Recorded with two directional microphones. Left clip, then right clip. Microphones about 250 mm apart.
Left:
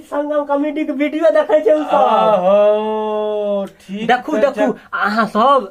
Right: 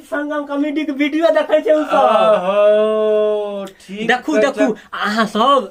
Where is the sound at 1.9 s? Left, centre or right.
Centre.